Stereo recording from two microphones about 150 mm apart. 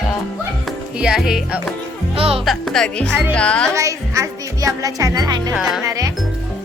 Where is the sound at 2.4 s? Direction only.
Centre (ahead or behind).